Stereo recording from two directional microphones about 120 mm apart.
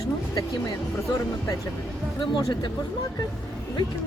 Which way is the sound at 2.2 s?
40° left (ahead or behind).